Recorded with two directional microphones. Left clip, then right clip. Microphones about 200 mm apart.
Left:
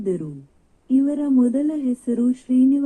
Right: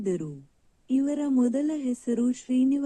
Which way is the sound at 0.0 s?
25° right (ahead or behind).